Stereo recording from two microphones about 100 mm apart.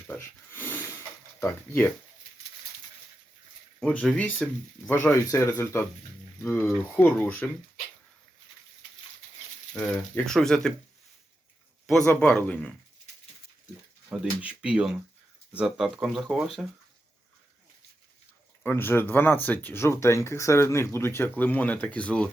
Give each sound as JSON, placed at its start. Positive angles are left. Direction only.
{"t": 0.2, "sound": "a sound", "side_deg": 20}
{"t": 1.4, "sound": "speech", "side_deg": 20}
{"t": 3.9, "sound": "speech", "side_deg": 15}
{"t": 9.7, "sound": "speech", "side_deg": 25}
{"t": 10.2, "sound": "speech", "side_deg": 5}
{"t": 12.0, "sound": "speech", "side_deg": 20}
{"t": 14.1, "sound": "speech", "side_deg": -10}
{"t": 18.6, "sound": "speech", "side_deg": 20}